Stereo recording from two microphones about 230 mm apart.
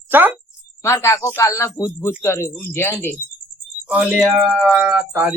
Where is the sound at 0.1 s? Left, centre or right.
Centre.